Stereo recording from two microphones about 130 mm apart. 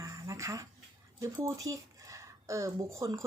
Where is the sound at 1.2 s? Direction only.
25° right (ahead or behind).